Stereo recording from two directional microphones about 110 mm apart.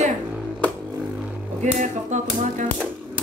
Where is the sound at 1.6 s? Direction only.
90° right.